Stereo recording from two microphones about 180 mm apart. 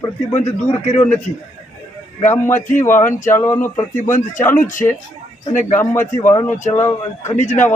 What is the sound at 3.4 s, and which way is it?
Speech, 15° left (ahead or behind).